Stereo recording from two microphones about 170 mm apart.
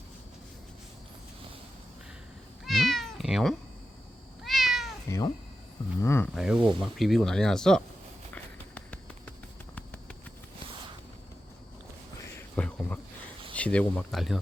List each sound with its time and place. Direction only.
2.6 s cat: centre (ahead or behind)
5.0 s speech: 15° left (ahead or behind)
6.3 s speech: 5° right (ahead or behind)
8.7 s a sound: 5° left (ahead or behind)
12.5 s a sound: 10° left (ahead or behind)
13.5 s speech: 5° left (ahead or behind)